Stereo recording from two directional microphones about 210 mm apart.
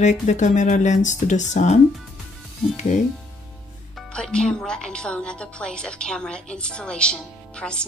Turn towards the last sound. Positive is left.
turn(degrees=5)  # may be behind; listen again after turning